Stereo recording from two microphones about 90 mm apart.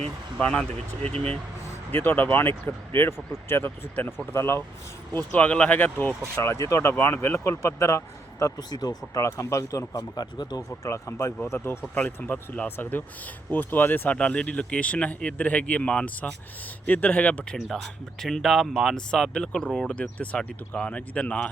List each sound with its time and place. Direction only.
0.3 s speech: 10° left (ahead or behind)
1.9 s speech: 25° left (ahead or behind)
5.1 s speech: 15° left (ahead or behind)
6.3 s a man's voice: 30° left (ahead or behind); by 9.2 s 45° left (ahead or behind)
9.2 s a man's voice: 35° left (ahead or behind)
10.0 s speech: 50° left (ahead or behind)
10.8 s a man's voice: 30° left (ahead or behind); by 17.6 s 15° left (ahead or behind)
18.2 s speech: 5° left (ahead or behind)